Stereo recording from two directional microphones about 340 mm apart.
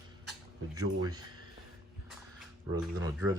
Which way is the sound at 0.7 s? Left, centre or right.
Centre.